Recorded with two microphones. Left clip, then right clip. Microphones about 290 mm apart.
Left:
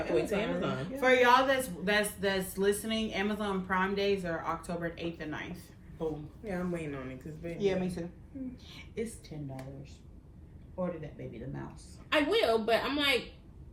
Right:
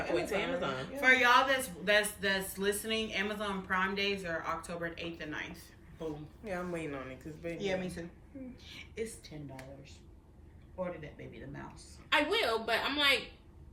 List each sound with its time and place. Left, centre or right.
0.2 s speech: centre
6.4 s speech: centre
7.6 s a woman's voice: centre
10.8 s speech: centre